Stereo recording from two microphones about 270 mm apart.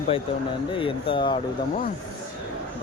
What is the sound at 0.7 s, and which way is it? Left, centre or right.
Speech, centre.